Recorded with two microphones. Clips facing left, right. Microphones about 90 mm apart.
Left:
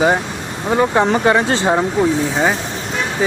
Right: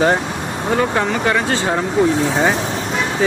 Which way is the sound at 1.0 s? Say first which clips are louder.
Left 4 dB; 35° left (ahead or behind).